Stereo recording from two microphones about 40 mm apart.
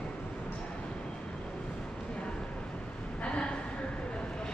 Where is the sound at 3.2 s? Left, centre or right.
Left.